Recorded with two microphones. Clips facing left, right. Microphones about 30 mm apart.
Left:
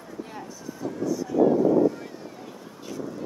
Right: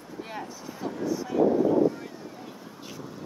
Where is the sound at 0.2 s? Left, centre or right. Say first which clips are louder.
Right 2 dB; right.